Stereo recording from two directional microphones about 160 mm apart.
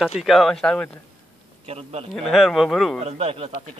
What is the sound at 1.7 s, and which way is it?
Speech, 40° right (ahead or behind).